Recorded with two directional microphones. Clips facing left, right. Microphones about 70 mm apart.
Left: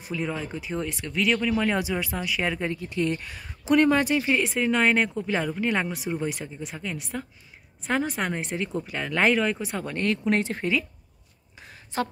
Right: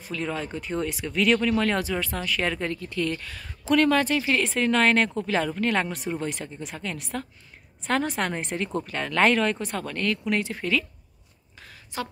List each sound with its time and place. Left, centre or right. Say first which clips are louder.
0.0 s speech: even; centre
9.8 s speech: left 3 dB; left
11.6 s a sound: left 3 dB; left